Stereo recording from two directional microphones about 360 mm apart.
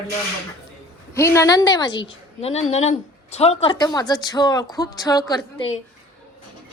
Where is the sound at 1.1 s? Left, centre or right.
Centre.